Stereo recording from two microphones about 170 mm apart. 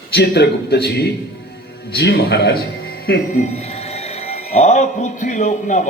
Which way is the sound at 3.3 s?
40° left (ahead or behind).